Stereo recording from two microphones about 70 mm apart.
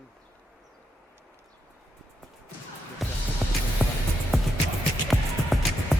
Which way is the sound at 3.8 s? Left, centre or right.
Right.